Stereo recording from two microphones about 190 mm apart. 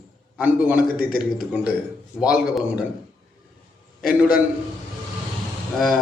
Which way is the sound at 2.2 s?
5° right (ahead or behind).